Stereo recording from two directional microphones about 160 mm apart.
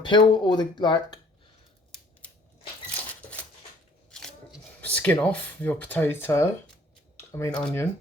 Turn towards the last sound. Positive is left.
turn(degrees=5)  # may be behind; listen again after turning